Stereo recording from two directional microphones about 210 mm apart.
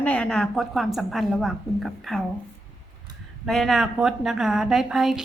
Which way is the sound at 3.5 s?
Centre (ahead or behind).